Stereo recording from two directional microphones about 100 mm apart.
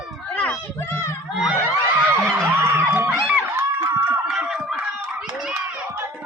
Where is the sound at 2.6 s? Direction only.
25° right (ahead or behind).